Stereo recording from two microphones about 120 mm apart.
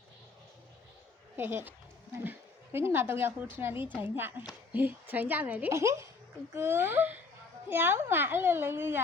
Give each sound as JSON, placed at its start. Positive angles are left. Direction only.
{"t": 1.4, "sound": "a woman's voice", "side_deg": -20}